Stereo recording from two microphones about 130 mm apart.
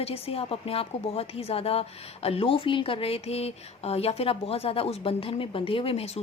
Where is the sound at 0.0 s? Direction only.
50° left (ahead or behind).